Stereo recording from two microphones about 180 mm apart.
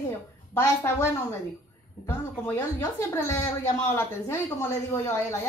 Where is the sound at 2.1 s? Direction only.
15° left (ahead or behind).